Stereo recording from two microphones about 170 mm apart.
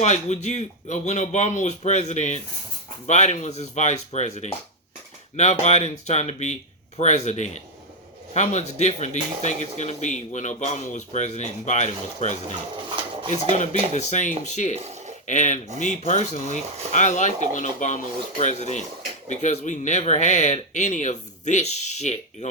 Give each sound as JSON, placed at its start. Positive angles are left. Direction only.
{"t": 0.0, "sound": "speech", "side_deg": 45}
{"t": 13.9, "sound": "speech", "side_deg": 45}